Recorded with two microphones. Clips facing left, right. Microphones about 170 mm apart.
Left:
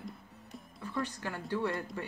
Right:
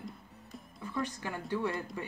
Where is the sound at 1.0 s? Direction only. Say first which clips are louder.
Right 1 dB; 15° right (ahead or behind).